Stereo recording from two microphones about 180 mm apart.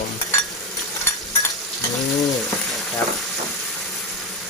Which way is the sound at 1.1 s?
15° left (ahead or behind).